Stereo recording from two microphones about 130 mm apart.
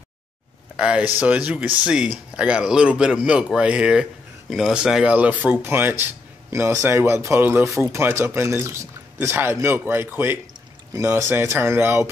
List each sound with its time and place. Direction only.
0.7 s speech: 10° right (ahead or behind)